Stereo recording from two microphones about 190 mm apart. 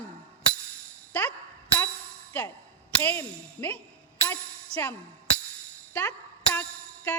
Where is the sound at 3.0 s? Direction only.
10° left (ahead or behind).